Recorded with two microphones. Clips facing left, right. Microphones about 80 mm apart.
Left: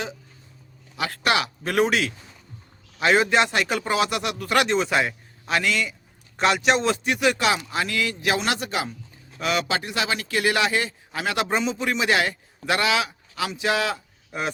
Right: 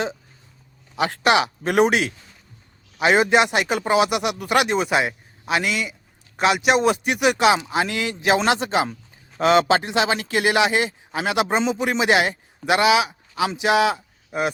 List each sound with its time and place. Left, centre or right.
0.9 s a man's voice: right